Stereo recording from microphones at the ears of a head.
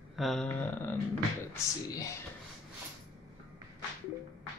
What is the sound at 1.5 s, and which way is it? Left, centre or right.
Speech, left.